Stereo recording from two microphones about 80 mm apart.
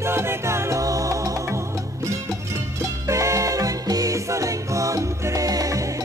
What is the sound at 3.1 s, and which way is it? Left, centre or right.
Music, right.